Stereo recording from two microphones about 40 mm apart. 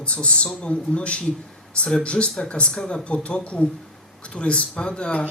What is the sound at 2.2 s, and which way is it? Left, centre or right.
Speech, centre.